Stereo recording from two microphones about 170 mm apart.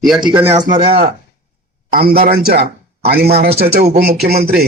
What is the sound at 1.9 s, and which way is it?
A man's voice, 60° right (ahead or behind).